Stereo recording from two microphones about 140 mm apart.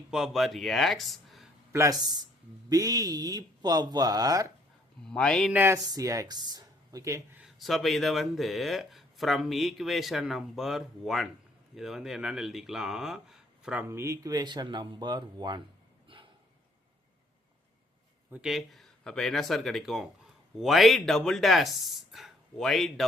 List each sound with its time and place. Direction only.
0.1 s speech: 5° right (ahead or behind)
1.7 s speech: 25° right (ahead or behind)
5.0 s speech: 5° left (ahead or behind)
5.5 s speech: 15° right (ahead or behind)
5.8 s a woman's voice: 25° right (ahead or behind)
7.3 s speech: centre (ahead or behind)
13.8 s speech: 20° right (ahead or behind)
16.0 s a sound: 40° right (ahead or behind)
18.3 s speech: 5° right (ahead or behind)